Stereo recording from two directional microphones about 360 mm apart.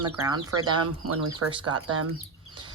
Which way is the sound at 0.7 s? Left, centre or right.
Right.